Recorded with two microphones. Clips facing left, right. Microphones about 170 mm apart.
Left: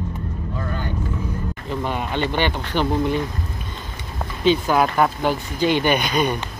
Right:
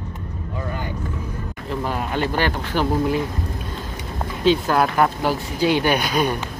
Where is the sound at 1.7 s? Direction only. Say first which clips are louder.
Right 1 dB; 5° right (ahead or behind).